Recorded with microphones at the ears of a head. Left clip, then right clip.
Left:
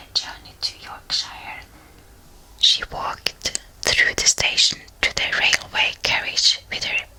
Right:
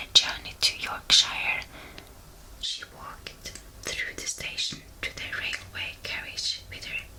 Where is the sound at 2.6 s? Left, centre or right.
Left.